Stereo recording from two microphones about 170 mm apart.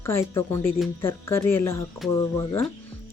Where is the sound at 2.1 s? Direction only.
20° left (ahead or behind).